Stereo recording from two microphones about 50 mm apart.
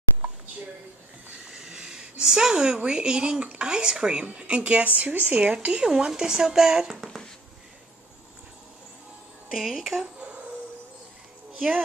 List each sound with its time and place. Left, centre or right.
1.5 s a woman's voice: centre
7.0 s speech: centre
9.5 s speech: centre